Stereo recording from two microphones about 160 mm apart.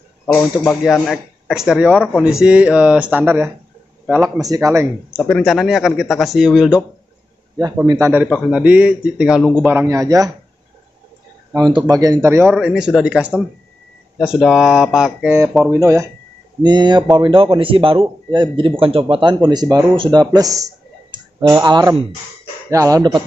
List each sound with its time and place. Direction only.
0.3 s a man's voice: 10° left (ahead or behind); by 3.5 s 15° right (ahead or behind)
4.0 s a sound: 5° right (ahead or behind)
4.4 s speech: 20° right (ahead or behind)
5.1 s speech: centre (ahead or behind)
7.8 s speech: 25° right (ahead or behind)
8.1 s a man's voice: 10° right (ahead or behind)
11.5 s speech: 25° right (ahead or behind)
12.4 s speech: 5° right (ahead or behind)
15.2 s a man's voice: 15° right (ahead or behind)